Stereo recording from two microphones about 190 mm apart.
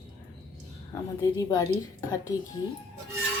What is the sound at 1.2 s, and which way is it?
A woman's voice, 20° left (ahead or behind).